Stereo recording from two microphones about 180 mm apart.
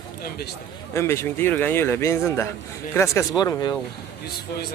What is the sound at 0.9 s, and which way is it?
A man's voice, 15° left (ahead or behind).